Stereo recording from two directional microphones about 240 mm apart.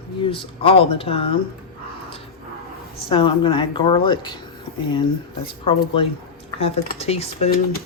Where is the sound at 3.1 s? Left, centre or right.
Left.